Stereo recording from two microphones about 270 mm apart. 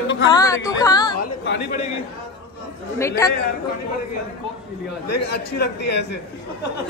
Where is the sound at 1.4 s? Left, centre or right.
Left.